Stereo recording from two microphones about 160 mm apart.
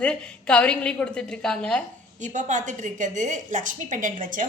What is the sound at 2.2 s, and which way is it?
A woman's voice, 50° right (ahead or behind).